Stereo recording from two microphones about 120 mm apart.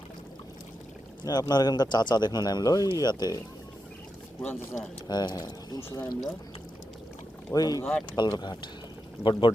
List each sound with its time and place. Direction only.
1.2 s speech: 35° left (ahead or behind)
4.4 s speech: 10° left (ahead or behind)
5.0 s speech: 35° left (ahead or behind)
7.5 s speech: 30° left (ahead or behind)